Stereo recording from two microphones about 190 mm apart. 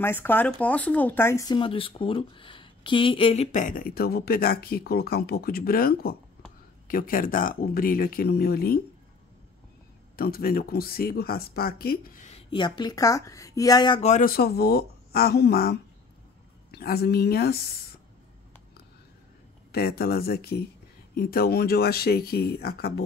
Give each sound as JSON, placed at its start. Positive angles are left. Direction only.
{"t": 0.0, "sound": "speech", "side_deg": 10}
{"t": 3.5, "sound": "speech", "side_deg": 45}
{"t": 10.1, "sound": "speech", "side_deg": 50}
{"t": 14.0, "sound": "speech", "side_deg": 45}
{"t": 19.7, "sound": "speech", "side_deg": 55}